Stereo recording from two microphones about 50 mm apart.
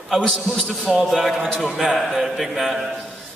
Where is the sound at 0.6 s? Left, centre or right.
Centre.